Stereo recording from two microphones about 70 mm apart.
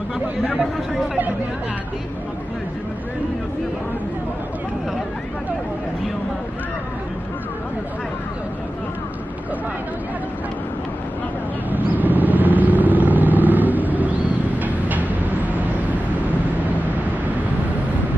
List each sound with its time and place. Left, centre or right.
11.7 s vehicle: right